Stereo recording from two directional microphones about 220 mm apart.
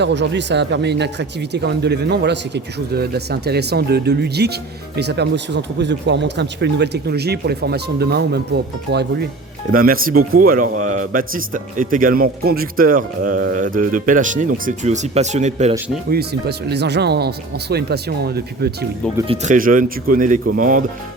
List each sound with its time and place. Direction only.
0.0 s a man's voice: 50° right (ahead or behind); by 15.7 s 30° right (ahead or behind)
16.0 s speech: 45° right (ahead or behind)
19.2 s speech: 25° right (ahead or behind)
19.5 s a man's voice: 40° right (ahead or behind)